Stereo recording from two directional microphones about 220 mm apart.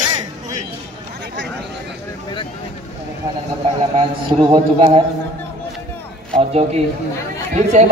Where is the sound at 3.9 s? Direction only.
20° right (ahead or behind).